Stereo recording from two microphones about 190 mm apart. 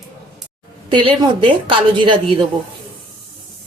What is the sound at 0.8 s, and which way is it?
A woman's voice, 25° right (ahead or behind).